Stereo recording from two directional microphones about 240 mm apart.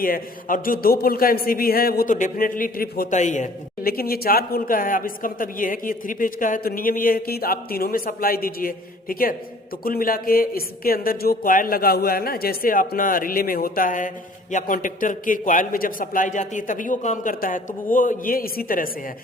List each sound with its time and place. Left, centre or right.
0.0 s a man's voice: left